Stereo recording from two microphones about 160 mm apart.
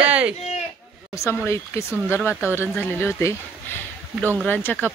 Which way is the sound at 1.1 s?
15° left (ahead or behind).